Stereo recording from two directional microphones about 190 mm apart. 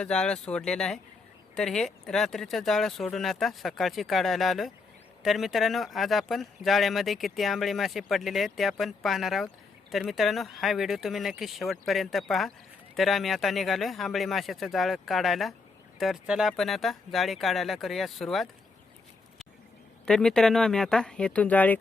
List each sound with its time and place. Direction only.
0.0 s speech: 5° left (ahead or behind)
20.1 s speech: 5° left (ahead or behind)